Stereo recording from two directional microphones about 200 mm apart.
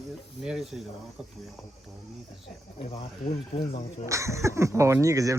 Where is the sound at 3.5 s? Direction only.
30° left (ahead or behind).